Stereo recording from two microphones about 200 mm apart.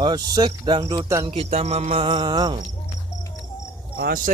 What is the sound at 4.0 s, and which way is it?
Speech, 45° right (ahead or behind).